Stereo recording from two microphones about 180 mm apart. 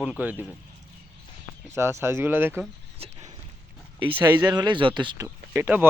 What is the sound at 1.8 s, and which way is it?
Speech, 15° right (ahead or behind).